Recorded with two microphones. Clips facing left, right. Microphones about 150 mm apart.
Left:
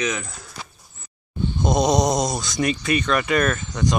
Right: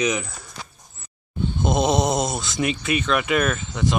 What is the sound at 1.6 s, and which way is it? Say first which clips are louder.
Speech: left 1 dB; 5° right (ahead or behind).